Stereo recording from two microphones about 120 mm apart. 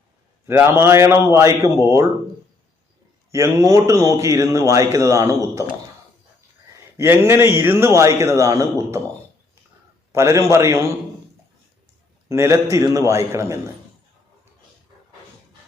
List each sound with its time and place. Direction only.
0.4 s a man's voice: 20° right (ahead or behind)
3.3 s a man's voice: 25° right (ahead or behind)
6.9 s a man's voice: 20° right (ahead or behind)
10.1 s a man's voice: 25° right (ahead or behind)
12.3 s a man's voice: 25° right (ahead or behind)